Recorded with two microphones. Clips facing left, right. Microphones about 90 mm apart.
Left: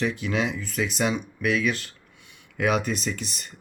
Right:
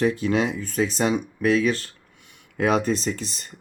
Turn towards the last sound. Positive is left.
turn(degrees=-30)  # may be behind; listen again after turning